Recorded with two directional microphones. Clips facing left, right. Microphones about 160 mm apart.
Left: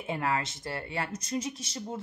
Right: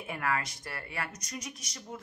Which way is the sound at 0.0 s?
25° left (ahead or behind).